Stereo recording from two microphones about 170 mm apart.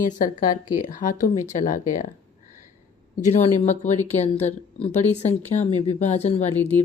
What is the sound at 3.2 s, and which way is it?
Speech, 45° left (ahead or behind).